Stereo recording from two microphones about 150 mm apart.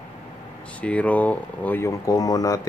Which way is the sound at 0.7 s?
10° left (ahead or behind).